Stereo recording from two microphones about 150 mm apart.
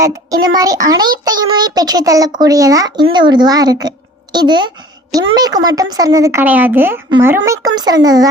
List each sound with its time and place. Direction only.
0.0 s child singing: 25° right (ahead or behind)